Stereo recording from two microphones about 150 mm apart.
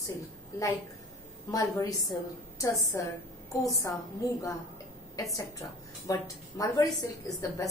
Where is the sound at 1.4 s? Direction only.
20° left (ahead or behind).